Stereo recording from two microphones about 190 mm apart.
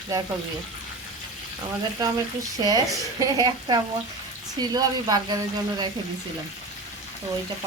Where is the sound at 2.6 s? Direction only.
20° right (ahead or behind).